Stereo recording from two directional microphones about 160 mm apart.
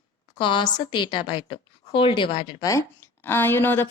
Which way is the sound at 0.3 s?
30° left (ahead or behind).